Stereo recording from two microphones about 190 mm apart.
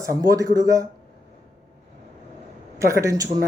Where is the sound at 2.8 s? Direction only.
15° right (ahead or behind).